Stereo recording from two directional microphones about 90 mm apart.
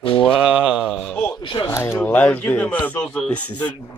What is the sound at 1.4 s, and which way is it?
Speech, 70° left (ahead or behind).